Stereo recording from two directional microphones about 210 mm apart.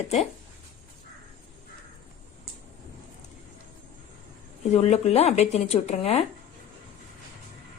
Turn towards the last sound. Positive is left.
turn(degrees=30)  # may be behind; listen again after turning